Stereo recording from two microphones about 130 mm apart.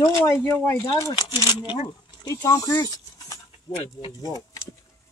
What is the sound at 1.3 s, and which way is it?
Speech, 35° left (ahead or behind).